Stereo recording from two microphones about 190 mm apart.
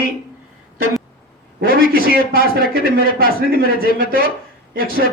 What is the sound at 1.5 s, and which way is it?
A man's voice, 50° right (ahead or behind).